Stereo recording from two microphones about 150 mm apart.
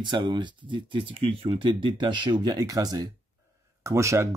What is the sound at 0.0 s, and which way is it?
Speech, 30° right (ahead or behind).